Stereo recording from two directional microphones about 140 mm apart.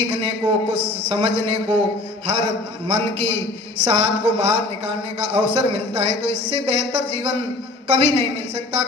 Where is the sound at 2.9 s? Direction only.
40° right (ahead or behind).